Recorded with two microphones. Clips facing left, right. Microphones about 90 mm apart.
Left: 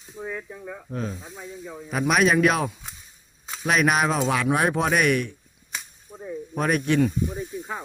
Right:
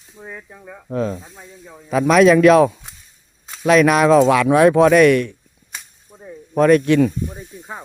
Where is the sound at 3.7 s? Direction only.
90° right.